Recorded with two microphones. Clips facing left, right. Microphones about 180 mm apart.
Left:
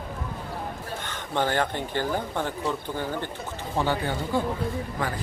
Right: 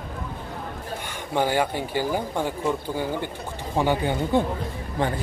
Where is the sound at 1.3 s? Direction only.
10° right (ahead or behind); by 5.1 s 25° right (ahead or behind).